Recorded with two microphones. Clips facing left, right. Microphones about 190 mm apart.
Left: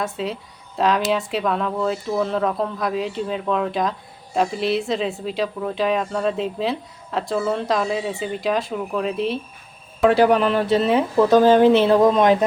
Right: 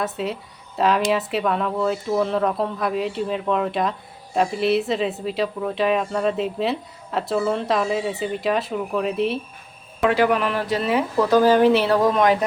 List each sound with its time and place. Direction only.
0.0 s speech: centre (ahead or behind)
10.1 s speech: 30° left (ahead or behind)